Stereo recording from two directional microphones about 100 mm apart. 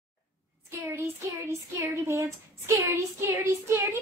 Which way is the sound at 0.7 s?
25° right (ahead or behind).